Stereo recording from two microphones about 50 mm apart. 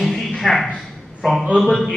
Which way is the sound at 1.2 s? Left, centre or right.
Centre.